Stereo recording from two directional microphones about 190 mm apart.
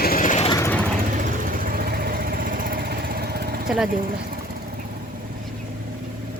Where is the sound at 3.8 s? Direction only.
50° right (ahead or behind).